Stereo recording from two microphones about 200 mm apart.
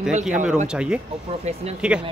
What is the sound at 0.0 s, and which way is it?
Speech, 5° right (ahead or behind).